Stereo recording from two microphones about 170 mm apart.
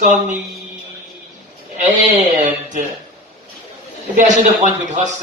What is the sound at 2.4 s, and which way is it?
Speech, 45° right (ahead or behind).